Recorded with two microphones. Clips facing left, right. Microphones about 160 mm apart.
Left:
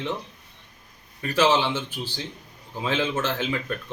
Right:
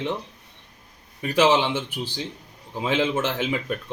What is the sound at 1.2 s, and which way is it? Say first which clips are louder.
A man's voice: right 2 dB; 15° right (ahead or behind).